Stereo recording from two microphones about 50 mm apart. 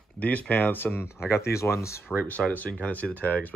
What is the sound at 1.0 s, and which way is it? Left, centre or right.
Speech, left.